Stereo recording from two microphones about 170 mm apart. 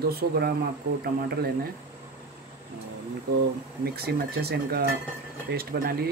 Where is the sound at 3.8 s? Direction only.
65° right (ahead or behind).